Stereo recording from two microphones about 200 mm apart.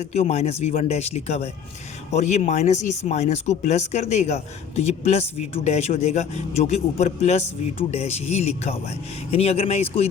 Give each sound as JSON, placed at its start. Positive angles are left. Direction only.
{"t": 0.0, "sound": "speech", "side_deg": 35}